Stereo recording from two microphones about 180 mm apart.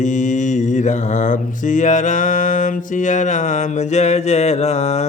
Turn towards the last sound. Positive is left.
turn(degrees=35)  # may be behind; listen again after turning